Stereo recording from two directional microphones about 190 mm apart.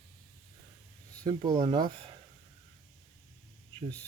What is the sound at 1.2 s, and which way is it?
Speech, 25° right (ahead or behind).